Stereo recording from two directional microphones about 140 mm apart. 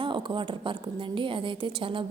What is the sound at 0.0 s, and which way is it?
A woman's voice, 35° right (ahead or behind).